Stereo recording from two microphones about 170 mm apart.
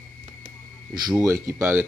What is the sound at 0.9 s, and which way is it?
Speech, 20° right (ahead or behind).